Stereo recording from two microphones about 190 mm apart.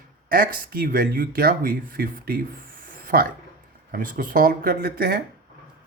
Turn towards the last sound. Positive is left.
turn(degrees=-55)  # may be behind; listen again after turning